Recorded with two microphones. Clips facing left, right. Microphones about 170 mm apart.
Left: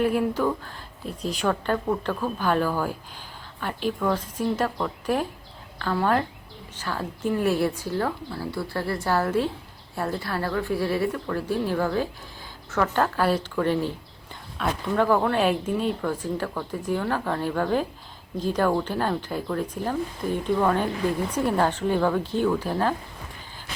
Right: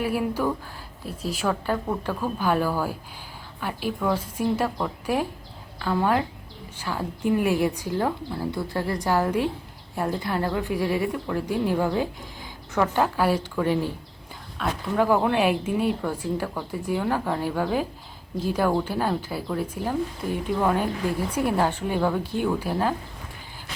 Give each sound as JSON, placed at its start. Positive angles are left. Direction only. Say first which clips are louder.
{"t": 0.0, "sound": "speech", "louder": "left 2 dB", "side_deg": -10}
{"t": 14.6, "sound": "speech", "louder": "left 1 dB", "side_deg": 0}
{"t": 14.9, "sound": "speech", "louder": "right 1 dB", "side_deg": -10}